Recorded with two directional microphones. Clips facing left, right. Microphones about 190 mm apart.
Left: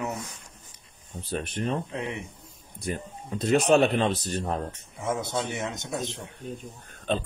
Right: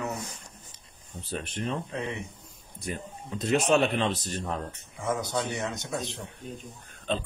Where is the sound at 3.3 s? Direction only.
35° left (ahead or behind).